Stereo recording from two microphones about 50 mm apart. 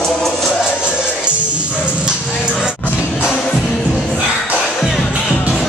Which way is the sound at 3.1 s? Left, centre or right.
Centre.